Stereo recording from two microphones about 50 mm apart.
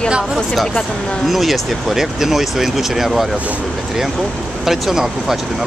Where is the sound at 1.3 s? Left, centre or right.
Centre.